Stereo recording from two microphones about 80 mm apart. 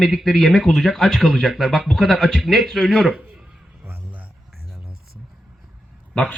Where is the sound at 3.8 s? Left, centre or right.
Centre.